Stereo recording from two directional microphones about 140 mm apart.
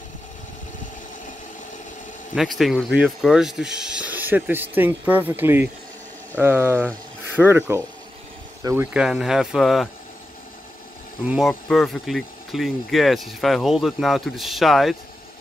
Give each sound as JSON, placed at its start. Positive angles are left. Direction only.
{"t": 2.3, "sound": "speech", "side_deg": 0}
{"t": 8.9, "sound": "speech", "side_deg": -5}
{"t": 11.2, "sound": "speech", "side_deg": -5}